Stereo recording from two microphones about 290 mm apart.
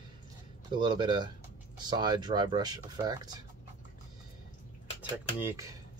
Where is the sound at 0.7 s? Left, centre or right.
Centre.